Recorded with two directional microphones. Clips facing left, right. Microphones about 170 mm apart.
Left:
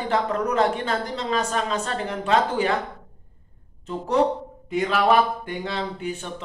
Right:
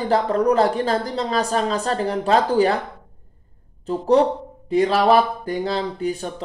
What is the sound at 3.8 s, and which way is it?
A woman's voice, 35° right (ahead or behind).